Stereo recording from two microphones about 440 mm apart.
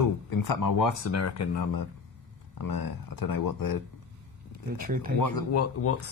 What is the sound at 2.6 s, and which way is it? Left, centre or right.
Speech, left.